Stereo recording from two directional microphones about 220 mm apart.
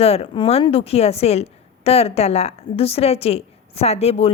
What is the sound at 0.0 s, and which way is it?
A woman's voice, 25° left (ahead or behind).